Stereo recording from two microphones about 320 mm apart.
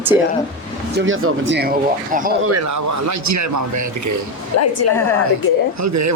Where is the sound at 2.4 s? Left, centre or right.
Right.